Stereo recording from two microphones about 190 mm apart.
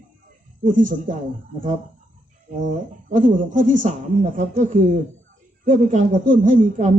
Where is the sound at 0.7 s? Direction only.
45° right (ahead or behind).